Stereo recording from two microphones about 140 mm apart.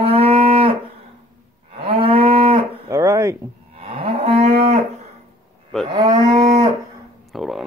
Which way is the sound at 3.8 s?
40° right (ahead or behind).